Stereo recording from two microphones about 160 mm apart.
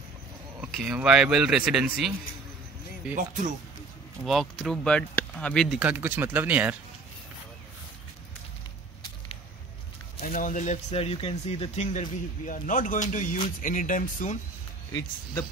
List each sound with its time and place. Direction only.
0.6 s speech: 5° right (ahead or behind)
4.2 s speech: centre (ahead or behind)
10.1 s speech: 60° left (ahead or behind)